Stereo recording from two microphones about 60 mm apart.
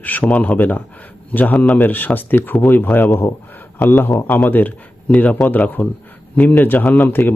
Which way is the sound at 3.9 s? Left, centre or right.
Left.